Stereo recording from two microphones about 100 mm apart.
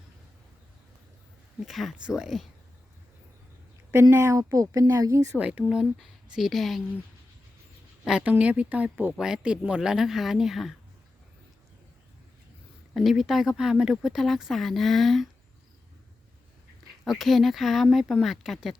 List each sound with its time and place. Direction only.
1.6 s speech: centre (ahead or behind)
4.1 s speech: 25° right (ahead or behind)
5.4 s speech: 15° right (ahead or behind)
8.0 s a woman's voice: 5° right (ahead or behind)
12.9 s speech: centre (ahead or behind)
17.0 s speech: centre (ahead or behind)